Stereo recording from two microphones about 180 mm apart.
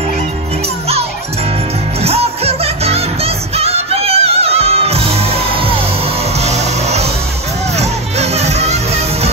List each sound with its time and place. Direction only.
2.0 s music: 35° right (ahead or behind)